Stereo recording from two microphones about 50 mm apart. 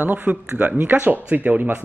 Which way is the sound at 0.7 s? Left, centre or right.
Right.